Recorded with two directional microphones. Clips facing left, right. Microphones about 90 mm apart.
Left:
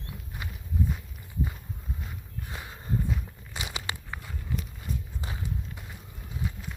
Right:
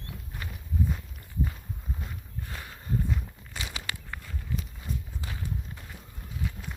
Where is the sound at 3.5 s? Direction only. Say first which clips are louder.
Left 2 dB; 20° left (ahead or behind).